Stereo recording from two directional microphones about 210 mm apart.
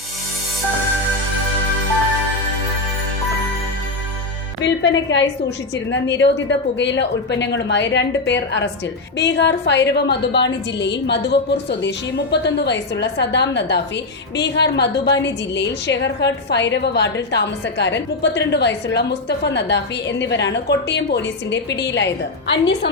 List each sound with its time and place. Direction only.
4.6 s a woman's voice: 60° left (ahead or behind)